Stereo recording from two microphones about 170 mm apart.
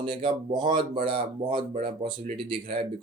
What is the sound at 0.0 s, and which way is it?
Speech, 30° right (ahead or behind).